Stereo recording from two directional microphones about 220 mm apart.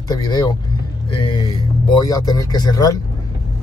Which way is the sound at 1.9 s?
15° left (ahead or behind).